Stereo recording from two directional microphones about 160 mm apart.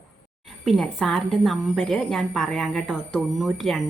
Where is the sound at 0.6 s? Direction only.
Centre (ahead or behind).